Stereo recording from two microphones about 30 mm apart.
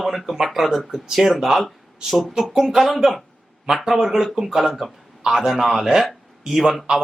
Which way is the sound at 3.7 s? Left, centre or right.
Right.